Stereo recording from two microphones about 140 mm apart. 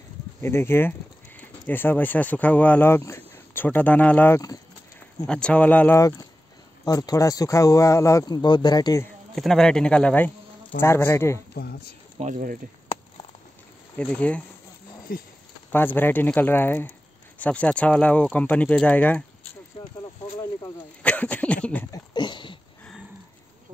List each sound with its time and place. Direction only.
0.4 s speech: 15° left (ahead or behind)
5.9 s speech: 25° left (ahead or behind)
9.3 s a man's voice: centre (ahead or behind); by 11.4 s 20° left (ahead or behind)
12.2 s speech: 65° right (ahead or behind)
13.9 s speech: 10° left (ahead or behind)
15.7 s speech: 15° left (ahead or behind)
21.0 s speech: 10° left (ahead or behind)
21.9 s a sound: 30° left (ahead or behind)